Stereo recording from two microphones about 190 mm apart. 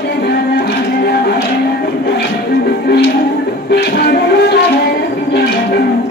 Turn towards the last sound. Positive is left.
turn(degrees=55)  # may be behind; listen again after turning